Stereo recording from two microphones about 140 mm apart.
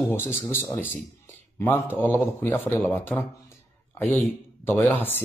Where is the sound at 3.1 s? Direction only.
15° left (ahead or behind).